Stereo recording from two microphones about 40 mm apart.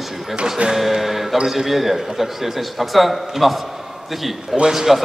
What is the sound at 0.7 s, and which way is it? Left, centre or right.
A man's voice, centre.